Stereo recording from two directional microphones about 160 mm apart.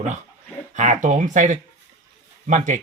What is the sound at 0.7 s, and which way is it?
Speech, 50° right (ahead or behind).